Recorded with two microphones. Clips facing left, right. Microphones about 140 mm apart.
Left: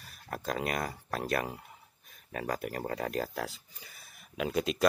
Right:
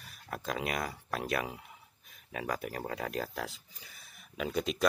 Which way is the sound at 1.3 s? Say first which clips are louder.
Left 2 dB; centre (ahead or behind).